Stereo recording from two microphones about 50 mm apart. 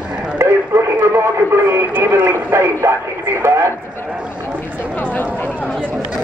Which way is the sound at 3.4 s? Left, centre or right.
Right.